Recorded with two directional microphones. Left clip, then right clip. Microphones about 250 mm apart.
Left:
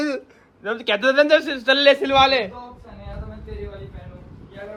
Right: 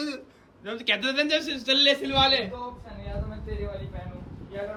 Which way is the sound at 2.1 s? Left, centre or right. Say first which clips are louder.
Left 7 dB; centre.